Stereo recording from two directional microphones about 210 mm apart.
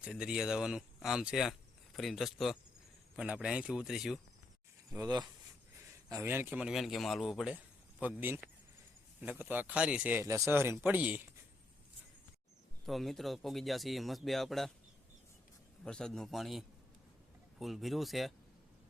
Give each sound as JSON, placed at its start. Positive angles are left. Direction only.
{"t": 0.0, "sound": "speech", "side_deg": -5}
{"t": 4.9, "sound": "speech", "side_deg": -15}
{"t": 12.8, "sound": "speech", "side_deg": 0}
{"t": 15.8, "sound": "speech", "side_deg": 5}